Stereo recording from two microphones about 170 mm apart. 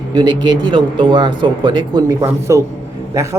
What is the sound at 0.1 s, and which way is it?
A man's voice, 25° right (ahead or behind).